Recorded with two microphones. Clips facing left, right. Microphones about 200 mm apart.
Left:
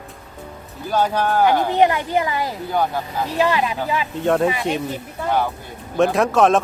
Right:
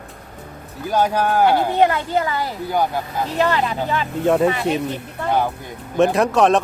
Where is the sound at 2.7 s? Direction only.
10° right (ahead or behind).